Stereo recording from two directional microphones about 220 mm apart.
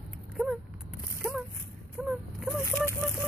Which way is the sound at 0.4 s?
Centre (ahead or behind).